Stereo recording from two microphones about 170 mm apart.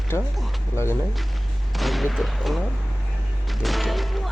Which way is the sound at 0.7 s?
15° left (ahead or behind).